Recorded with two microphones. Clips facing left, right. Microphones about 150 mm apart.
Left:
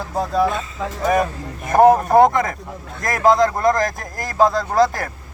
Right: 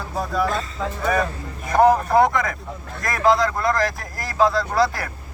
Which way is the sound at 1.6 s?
50° left (ahead or behind).